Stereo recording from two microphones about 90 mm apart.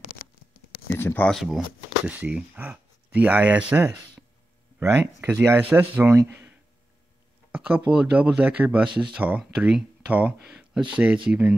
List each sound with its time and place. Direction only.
0.9 s speech: 25° left (ahead or behind)
1.3 s speech: 5° right (ahead or behind); by 6.1 s 20° right (ahead or behind)
7.5 s speech: 15° right (ahead or behind)